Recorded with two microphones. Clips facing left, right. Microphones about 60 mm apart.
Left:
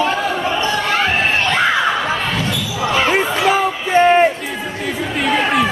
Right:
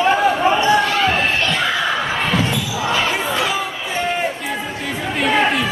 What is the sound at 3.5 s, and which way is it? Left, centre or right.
Music, left.